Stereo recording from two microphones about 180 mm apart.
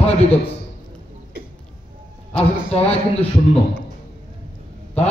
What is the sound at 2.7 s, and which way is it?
Speech, 35° left (ahead or behind).